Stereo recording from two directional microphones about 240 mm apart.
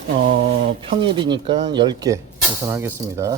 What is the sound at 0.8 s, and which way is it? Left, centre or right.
Speech, right.